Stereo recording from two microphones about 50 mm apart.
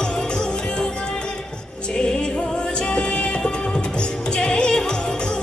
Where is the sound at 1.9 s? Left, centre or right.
Centre.